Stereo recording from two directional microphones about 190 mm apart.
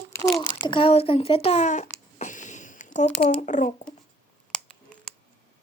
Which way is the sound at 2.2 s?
40° left (ahead or behind).